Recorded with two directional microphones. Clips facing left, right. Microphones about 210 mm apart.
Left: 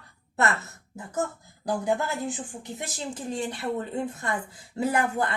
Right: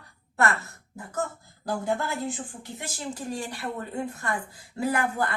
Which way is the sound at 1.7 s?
20° left (ahead or behind).